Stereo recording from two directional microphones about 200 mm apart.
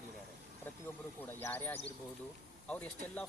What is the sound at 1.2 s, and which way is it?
Speech, 10° left (ahead or behind).